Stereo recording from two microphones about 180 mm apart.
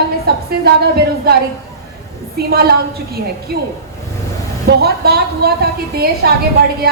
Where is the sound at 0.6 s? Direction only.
60° right (ahead or behind).